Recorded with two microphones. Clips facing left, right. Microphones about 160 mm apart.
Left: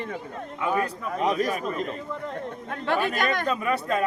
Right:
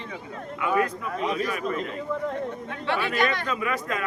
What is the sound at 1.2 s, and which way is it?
Speech, 40° left (ahead or behind).